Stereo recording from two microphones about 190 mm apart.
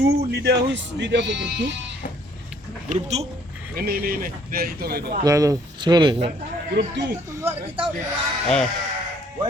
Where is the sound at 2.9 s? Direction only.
35° right (ahead or behind).